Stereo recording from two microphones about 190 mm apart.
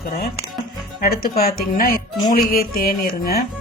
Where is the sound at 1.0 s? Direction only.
50° left (ahead or behind).